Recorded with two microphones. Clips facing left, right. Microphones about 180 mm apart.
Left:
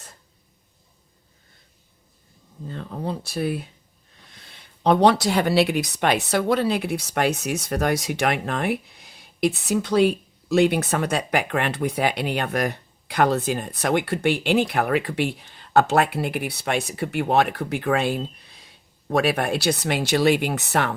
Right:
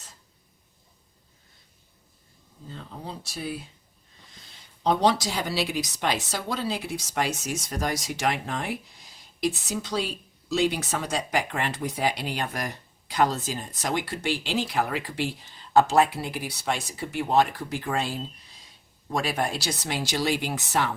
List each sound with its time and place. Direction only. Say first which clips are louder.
2.6 s speech: left 9 dB; 60° left (ahead or behind)